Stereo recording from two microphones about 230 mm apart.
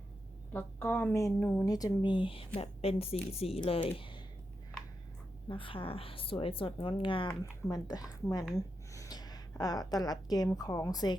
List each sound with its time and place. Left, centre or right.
0.5 s a woman's voice: centre
5.5 s a woman's voice: left